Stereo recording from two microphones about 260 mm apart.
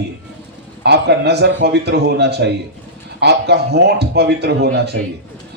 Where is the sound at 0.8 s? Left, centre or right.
Right.